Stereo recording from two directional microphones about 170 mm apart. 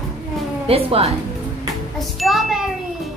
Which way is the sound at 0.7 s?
35° right (ahead or behind).